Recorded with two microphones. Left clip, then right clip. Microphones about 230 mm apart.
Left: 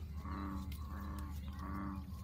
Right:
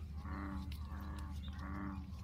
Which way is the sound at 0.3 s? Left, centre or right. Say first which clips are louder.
Left 2 dB; left.